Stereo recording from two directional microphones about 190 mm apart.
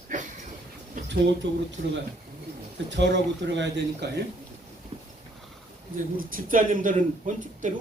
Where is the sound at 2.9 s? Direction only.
65° right (ahead or behind).